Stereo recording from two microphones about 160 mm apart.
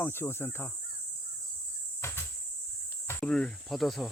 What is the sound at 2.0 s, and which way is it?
Cricket, 15° left (ahead or behind).